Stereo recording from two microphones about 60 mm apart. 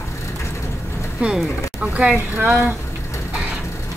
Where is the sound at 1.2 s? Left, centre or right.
Centre.